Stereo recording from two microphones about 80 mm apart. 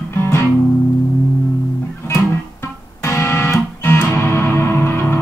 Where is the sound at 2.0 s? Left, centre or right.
Left.